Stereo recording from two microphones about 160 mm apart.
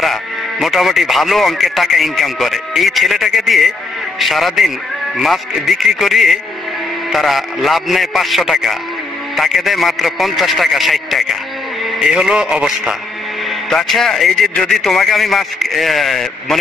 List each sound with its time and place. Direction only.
0.0 s speech: centre (ahead or behind)